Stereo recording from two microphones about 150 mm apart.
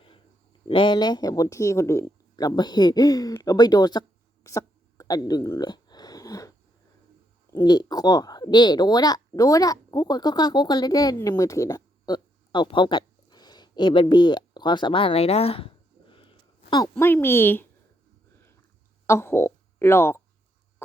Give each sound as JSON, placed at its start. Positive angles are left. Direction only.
{"t": 0.7, "sound": "speech", "side_deg": 35}
{"t": 4.4, "sound": "a sound", "side_deg": 20}
{"t": 7.5, "sound": "speech", "side_deg": 30}
{"t": 16.9, "sound": "speech", "side_deg": 15}
{"t": 19.0, "sound": "speech", "side_deg": 15}